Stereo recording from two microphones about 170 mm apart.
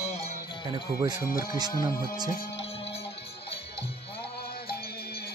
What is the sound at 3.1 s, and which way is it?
Music, 80° left.